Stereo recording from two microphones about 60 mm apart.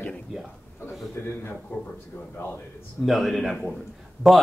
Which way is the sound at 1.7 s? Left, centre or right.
Left.